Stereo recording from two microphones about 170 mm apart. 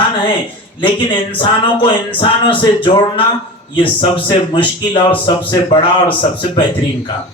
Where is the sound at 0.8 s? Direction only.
30° left (ahead or behind).